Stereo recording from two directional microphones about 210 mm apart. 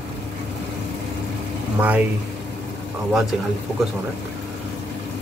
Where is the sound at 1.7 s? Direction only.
5° right (ahead or behind).